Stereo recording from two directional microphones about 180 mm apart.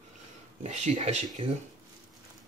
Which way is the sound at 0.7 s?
40° right (ahead or behind).